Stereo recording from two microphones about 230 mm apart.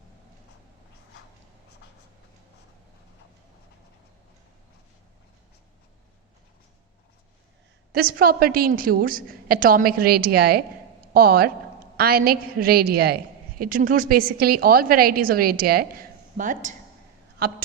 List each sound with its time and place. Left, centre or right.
7.9 s a woman's voice: right